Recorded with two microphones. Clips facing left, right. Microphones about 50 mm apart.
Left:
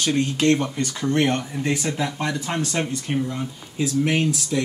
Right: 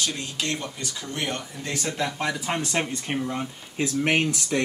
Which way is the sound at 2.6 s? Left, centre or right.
Centre.